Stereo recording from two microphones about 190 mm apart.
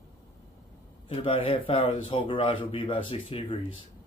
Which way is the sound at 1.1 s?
30° left (ahead or behind).